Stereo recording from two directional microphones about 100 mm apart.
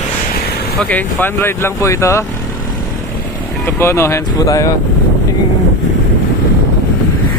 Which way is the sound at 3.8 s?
25° left (ahead or behind).